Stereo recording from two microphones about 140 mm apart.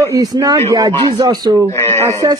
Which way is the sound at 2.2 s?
30° right (ahead or behind).